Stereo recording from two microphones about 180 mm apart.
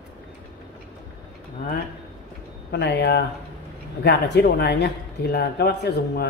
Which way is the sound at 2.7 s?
70° left (ahead or behind).